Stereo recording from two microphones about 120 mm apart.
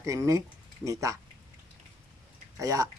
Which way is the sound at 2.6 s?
30° right (ahead or behind).